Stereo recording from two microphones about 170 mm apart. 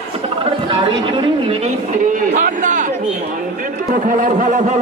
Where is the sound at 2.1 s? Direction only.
50° right (ahead or behind).